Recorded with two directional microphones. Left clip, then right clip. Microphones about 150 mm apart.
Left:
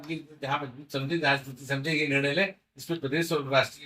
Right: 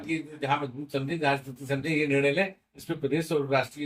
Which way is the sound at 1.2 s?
25° right (ahead or behind).